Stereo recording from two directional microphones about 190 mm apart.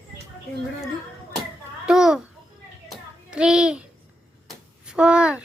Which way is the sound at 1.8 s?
5° right (ahead or behind).